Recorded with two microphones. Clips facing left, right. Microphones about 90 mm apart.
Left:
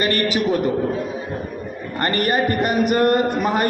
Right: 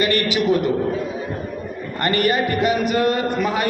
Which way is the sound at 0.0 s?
40° left (ahead or behind).